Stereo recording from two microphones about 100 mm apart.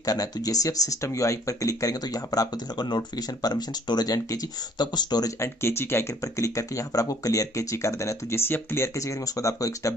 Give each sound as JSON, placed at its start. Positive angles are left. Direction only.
{"t": 0.0, "sound": "speech", "side_deg": 35}
{"t": 5.4, "sound": "speech", "side_deg": 25}